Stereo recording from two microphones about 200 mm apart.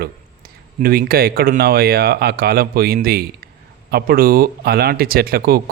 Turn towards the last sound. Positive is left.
turn(degrees=-50)  # may be behind; listen again after turning